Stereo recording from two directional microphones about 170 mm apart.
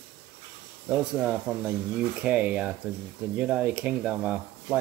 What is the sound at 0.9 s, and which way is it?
Speech, 5° right (ahead or behind).